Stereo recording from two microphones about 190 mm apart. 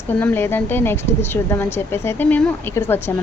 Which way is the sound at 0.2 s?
10° left (ahead or behind).